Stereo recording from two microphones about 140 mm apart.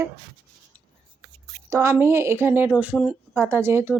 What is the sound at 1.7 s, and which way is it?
A woman's voice, 20° right (ahead or behind).